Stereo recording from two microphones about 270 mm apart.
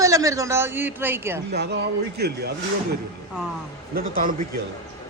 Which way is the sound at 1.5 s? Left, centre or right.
Right.